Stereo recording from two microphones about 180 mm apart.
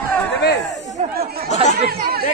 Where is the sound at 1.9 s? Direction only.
60° right (ahead or behind).